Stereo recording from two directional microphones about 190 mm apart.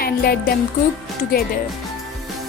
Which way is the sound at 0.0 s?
55° left (ahead or behind).